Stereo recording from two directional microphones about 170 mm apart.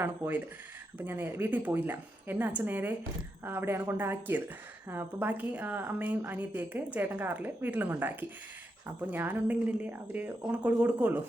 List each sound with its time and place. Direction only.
0.0 s a woman's voice: 10° right (ahead or behind)